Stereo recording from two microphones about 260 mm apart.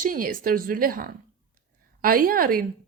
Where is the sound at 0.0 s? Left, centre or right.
Right.